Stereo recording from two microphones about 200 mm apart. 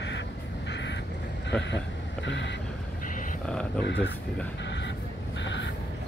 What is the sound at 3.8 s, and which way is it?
Speech, 60° left (ahead or behind).